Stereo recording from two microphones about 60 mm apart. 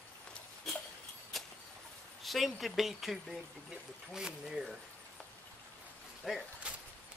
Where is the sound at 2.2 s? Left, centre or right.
Centre.